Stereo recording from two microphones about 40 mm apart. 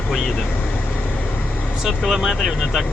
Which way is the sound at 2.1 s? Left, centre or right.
Centre.